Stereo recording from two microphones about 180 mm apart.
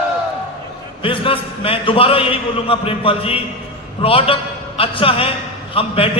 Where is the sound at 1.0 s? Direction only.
30° left (ahead or behind).